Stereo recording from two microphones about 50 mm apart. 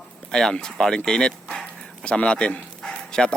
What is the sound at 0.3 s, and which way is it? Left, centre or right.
A man's voice, centre.